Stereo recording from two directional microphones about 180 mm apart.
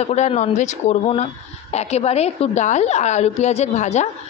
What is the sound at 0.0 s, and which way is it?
Speech, 40° left (ahead or behind).